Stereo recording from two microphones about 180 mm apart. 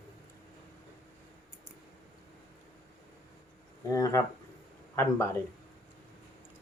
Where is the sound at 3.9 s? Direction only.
15° left (ahead or behind).